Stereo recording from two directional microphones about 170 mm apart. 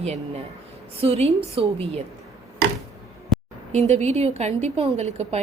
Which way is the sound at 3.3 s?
Centre (ahead or behind).